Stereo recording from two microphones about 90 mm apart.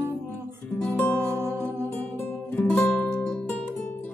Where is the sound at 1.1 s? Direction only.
25° right (ahead or behind).